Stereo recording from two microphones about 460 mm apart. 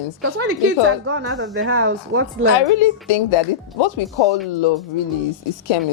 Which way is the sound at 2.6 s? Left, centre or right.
Left.